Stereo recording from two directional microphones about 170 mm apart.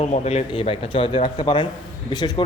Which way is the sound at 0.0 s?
40° left (ahead or behind).